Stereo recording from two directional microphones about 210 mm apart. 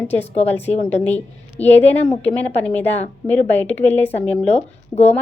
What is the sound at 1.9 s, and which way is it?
Speech, 30° left (ahead or behind).